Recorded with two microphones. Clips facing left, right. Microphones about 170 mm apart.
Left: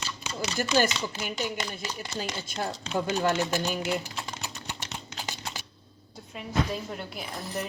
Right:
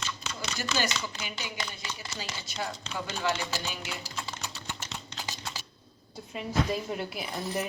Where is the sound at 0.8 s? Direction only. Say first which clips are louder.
Left 7 dB; 50° left (ahead or behind).